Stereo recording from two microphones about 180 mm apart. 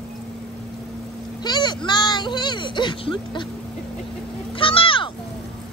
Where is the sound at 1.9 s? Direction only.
25° left (ahead or behind).